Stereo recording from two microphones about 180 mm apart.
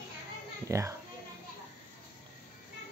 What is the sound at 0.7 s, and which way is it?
Speech, 15° right (ahead or behind).